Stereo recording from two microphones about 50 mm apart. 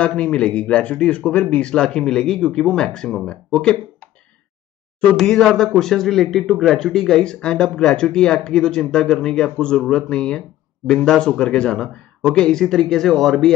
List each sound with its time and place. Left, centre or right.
0.0 s speech: left
5.2 s speech: centre